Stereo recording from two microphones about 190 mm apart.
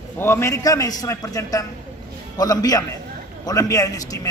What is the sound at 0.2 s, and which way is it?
A man's voice, 15° left (ahead or behind).